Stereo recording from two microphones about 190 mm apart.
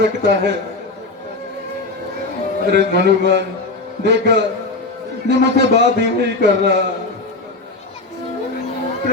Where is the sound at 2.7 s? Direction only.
65° right (ahead or behind).